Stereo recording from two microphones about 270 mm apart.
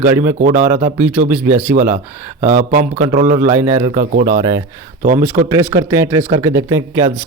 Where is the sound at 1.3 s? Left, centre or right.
Centre.